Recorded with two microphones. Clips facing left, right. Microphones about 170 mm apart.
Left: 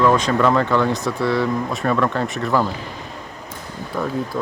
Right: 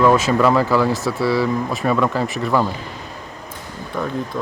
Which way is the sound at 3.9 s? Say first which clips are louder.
Even; 5° left (ahead or behind).